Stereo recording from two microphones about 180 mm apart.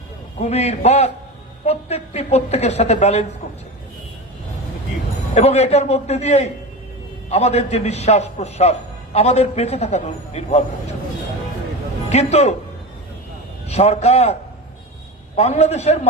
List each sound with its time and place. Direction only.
0.3 s a woman's voice: 35° left (ahead or behind)
5.3 s a woman's voice: 35° left (ahead or behind)
12.0 s a woman's voice: 35° left (ahead or behind)
13.7 s a woman's voice: 35° left (ahead or behind)
15.4 s a woman's voice: 35° left (ahead or behind)